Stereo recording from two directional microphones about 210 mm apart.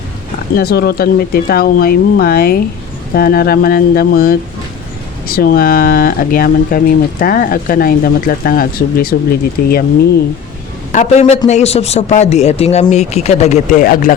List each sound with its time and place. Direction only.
0.5 s speech: 45° left (ahead or behind)
10.9 s speech: 35° left (ahead or behind)